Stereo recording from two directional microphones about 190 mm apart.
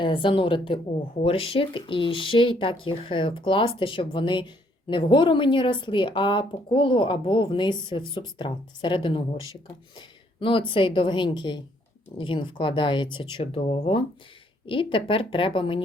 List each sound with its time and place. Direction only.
0.0 s speech: 25° left (ahead or behind)
10.4 s speech: 25° left (ahead or behind)